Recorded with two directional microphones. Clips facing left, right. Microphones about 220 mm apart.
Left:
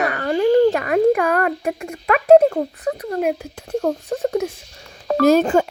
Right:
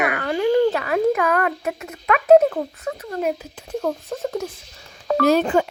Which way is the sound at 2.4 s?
25° left (ahead or behind).